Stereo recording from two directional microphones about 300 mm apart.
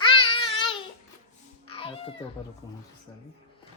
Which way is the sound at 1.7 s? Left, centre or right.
Centre.